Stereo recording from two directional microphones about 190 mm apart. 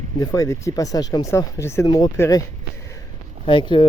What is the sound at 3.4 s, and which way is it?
Speech, 25° left (ahead or behind).